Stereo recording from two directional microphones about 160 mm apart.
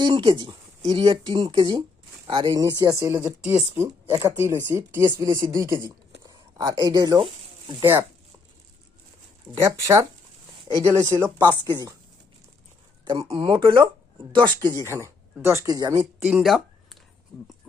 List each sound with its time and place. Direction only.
0.0 s speech: 30° right (ahead or behind)
0.8 s speech: 40° right (ahead or behind)
1.0 s a woman's voice: 30° right (ahead or behind)
9.6 s speech: 20° right (ahead or behind)
13.1 s speech: 30° right (ahead or behind)
16.2 s a sound: 5° right (ahead or behind)